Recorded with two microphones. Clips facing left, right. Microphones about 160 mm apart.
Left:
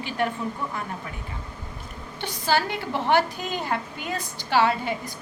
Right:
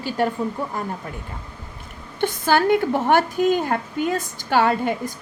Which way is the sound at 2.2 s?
50° right (ahead or behind).